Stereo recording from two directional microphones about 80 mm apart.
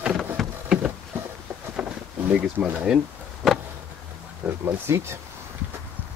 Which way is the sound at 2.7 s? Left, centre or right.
Centre.